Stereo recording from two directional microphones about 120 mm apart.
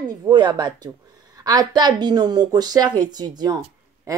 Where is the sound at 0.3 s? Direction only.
40° right (ahead or behind).